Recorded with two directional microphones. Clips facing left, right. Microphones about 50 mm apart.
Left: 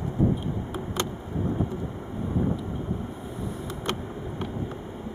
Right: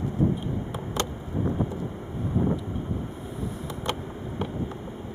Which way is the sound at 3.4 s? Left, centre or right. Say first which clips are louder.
Even; centre.